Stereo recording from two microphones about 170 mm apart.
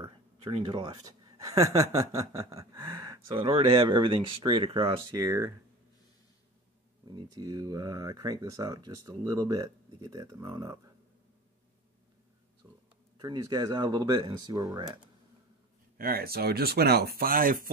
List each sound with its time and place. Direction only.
0.1 s speech: 30° right (ahead or behind)
7.1 s speech: 25° right (ahead or behind)
13.2 s speech: 25° right (ahead or behind)
16.0 s speech: 60° right (ahead or behind)